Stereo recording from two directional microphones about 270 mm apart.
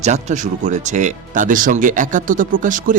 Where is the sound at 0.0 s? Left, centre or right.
Right.